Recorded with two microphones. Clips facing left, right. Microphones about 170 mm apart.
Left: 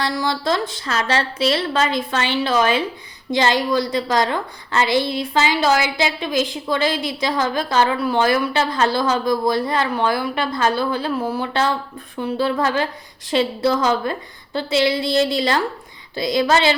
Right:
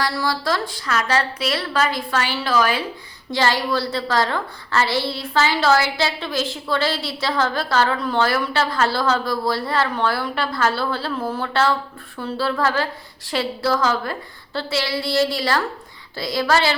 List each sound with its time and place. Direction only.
0.0 s a woman's voice: 20° left (ahead or behind)